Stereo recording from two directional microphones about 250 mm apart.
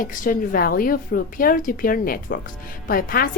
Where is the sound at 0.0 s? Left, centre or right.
Left.